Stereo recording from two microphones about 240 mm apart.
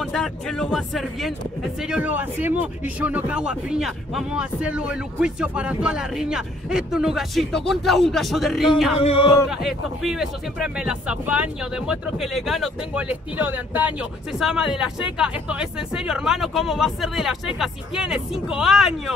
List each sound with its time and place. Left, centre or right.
0.0 s speech: centre
8.9 s a sound: left
9.5 s speech: centre